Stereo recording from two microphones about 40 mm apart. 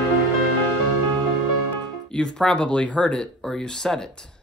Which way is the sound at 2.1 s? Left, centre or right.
Left.